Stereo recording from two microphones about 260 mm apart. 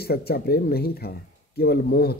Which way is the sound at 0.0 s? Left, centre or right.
Left.